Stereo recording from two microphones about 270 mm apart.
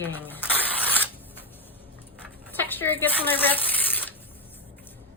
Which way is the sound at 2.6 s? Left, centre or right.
Centre.